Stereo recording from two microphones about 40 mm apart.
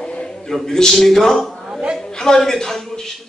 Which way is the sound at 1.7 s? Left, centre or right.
Right.